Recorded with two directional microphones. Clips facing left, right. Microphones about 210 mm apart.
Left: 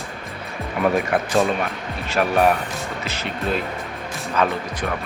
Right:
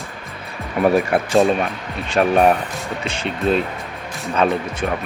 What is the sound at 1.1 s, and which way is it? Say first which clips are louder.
Speech: right 4 dB; 30° right (ahead or behind).